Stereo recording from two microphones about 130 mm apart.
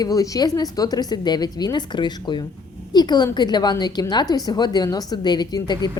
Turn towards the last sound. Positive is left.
turn(degrees=35)  # may be behind; listen again after turning